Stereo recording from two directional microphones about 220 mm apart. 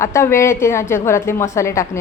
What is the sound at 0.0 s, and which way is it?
A woman's voice, 10° left (ahead or behind).